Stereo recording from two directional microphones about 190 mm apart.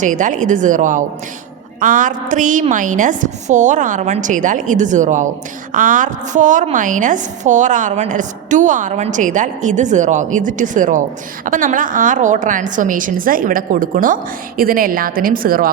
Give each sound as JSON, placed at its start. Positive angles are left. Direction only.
{"t": 0.0, "sound": "a woman's voice", "side_deg": -40}